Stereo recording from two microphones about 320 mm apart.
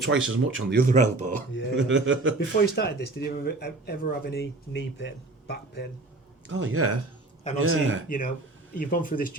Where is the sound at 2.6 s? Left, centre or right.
Left.